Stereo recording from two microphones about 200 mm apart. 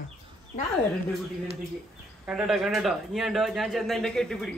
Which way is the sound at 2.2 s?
5° right (ahead or behind).